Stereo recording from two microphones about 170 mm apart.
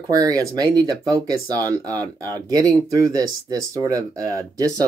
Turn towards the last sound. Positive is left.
turn(degrees=-20)  # may be behind; listen again after turning